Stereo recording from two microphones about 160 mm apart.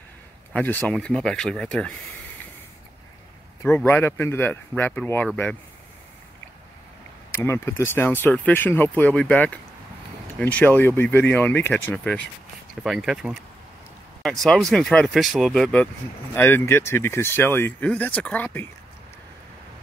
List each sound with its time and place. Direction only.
0.5 s speech: 10° left (ahead or behind)
3.6 s speech: 15° left (ahead or behind)
7.4 s speech: 15° left (ahead or behind)